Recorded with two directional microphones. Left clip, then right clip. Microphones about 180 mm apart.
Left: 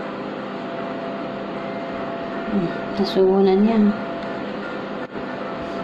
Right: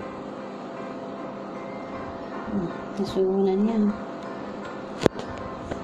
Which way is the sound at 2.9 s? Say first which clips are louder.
Left 7 dB; 15° right (ahead or behind).